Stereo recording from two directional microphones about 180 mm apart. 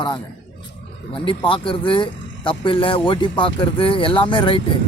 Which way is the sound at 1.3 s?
30° left (ahead or behind).